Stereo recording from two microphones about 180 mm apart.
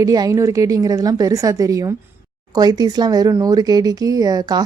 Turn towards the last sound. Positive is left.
turn(degrees=-20)  # may be behind; listen again after turning